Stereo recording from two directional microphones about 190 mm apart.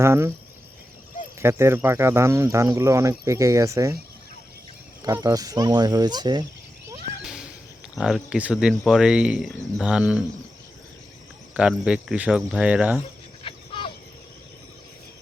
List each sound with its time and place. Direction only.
0.0 s speech: 15° right (ahead or behind)
1.4 s speech: 15° right (ahead or behind)
5.0 s speech: 20° right (ahead or behind)
7.2 s a sound: 5° right (ahead or behind)
7.9 s speech: 5° right (ahead or behind)
11.5 s speech: 5° right (ahead or behind)
13.4 s dog: 25° left (ahead or behind)